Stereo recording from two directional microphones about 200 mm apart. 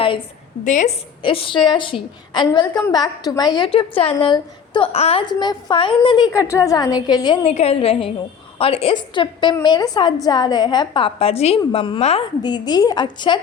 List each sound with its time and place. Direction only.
0.6 s a woman's voice: 40° left (ahead or behind)
1.2 s a woman's voice: 25° left (ahead or behind)